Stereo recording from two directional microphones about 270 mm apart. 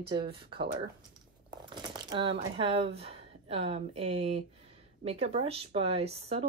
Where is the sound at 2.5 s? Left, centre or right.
Right.